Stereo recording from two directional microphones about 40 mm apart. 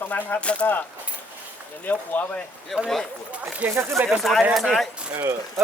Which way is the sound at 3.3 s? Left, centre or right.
Right.